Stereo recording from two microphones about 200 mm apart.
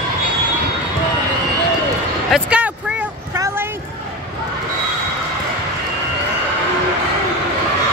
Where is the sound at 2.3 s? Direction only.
5° right (ahead or behind).